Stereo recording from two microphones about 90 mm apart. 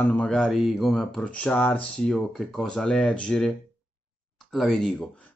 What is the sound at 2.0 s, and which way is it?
Speech, 5° left (ahead or behind).